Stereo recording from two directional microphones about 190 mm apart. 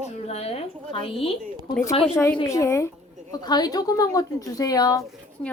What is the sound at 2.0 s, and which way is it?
A woman's voice, 10° left (ahead or behind).